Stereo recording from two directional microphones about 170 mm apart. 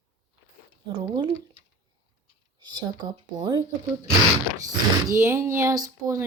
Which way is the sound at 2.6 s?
25° right (ahead or behind).